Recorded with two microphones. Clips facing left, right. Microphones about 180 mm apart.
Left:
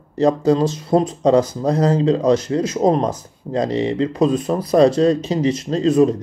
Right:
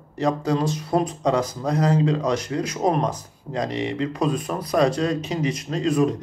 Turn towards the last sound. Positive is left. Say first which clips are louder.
# left 6 dB
turn(degrees=25)  # may be behind; listen again after turning